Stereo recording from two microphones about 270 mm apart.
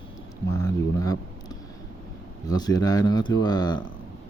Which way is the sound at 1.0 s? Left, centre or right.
Centre.